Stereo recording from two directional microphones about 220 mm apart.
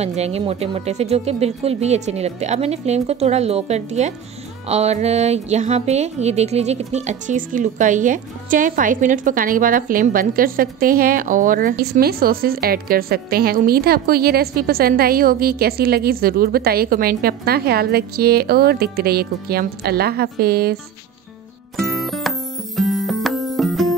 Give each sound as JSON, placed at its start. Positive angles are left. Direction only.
{"t": 0.0, "sound": "speech", "side_deg": -30}
{"t": 21.7, "sound": "music", "side_deg": 0}